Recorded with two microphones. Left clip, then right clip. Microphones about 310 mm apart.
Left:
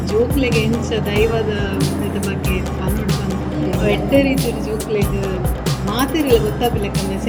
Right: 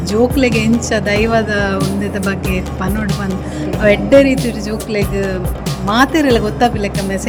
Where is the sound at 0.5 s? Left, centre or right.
Centre.